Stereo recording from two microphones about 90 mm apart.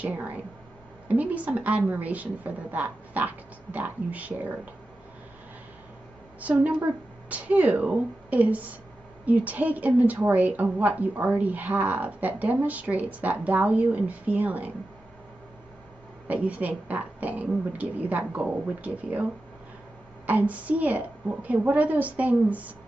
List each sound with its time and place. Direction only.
0.0 s a woman's voice: 20° right (ahead or behind)
6.4 s a woman's voice: 15° right (ahead or behind)
16.3 s a woman's voice: 15° right (ahead or behind)
20.2 s a woman's voice: 20° right (ahead or behind)